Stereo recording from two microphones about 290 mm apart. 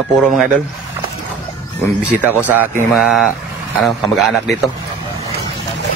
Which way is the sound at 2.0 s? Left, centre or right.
Centre.